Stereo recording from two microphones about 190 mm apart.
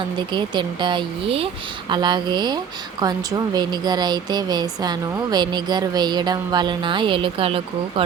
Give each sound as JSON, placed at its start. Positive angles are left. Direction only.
{"t": 0.2, "sound": "speech", "side_deg": -25}